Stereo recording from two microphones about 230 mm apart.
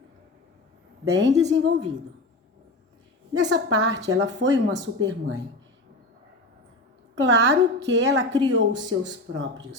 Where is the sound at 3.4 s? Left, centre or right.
Right.